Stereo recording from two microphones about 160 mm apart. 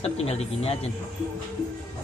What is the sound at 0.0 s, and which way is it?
Speech, 40° left (ahead or behind).